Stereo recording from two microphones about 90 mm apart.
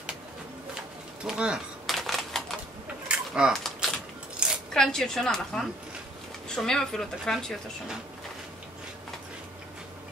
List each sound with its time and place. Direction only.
1.2 s speech: 10° right (ahead or behind)
1.9 s typing: centre (ahead or behind)
3.1 s a sound: 10° right (ahead or behind)
3.5 s a sound: 5° left (ahead or behind)
4.4 s coin: 10° right (ahead or behind)
4.7 s speech: 5° left (ahead or behind)